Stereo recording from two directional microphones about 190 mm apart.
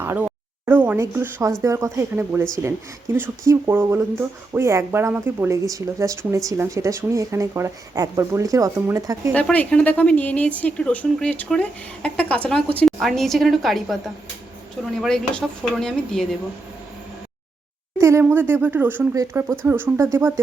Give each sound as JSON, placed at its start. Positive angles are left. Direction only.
{"t": 0.0, "sound": "speech", "side_deg": -10}
{"t": 9.3, "sound": "a woman's voice", "side_deg": 5}
{"t": 15.0, "sound": "a woman's voice", "side_deg": 0}
{"t": 18.0, "sound": "speech", "side_deg": -15}